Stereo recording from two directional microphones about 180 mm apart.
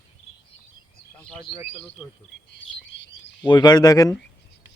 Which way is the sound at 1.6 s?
35° left (ahead or behind).